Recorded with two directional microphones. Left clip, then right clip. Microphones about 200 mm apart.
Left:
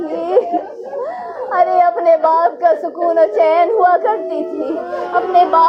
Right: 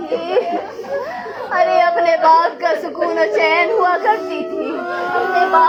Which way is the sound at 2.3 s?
15° right (ahead or behind).